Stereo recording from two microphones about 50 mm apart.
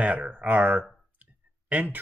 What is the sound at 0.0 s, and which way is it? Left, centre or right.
Speech, right.